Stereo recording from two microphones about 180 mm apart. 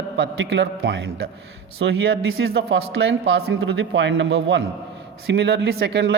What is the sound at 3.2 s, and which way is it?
A man's voice, 65° right (ahead or behind).